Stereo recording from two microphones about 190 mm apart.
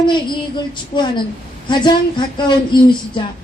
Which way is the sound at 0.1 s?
25° left (ahead or behind).